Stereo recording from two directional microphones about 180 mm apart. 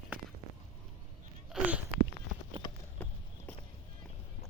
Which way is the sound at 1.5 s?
5° right (ahead or behind).